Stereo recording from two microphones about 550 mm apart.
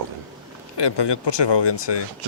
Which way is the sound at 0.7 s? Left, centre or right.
Left.